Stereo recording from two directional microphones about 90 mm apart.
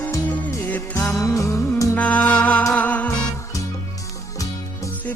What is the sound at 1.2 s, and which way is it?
Music, 35° left (ahead or behind).